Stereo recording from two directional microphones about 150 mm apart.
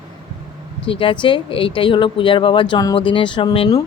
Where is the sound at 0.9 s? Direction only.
35° left (ahead or behind).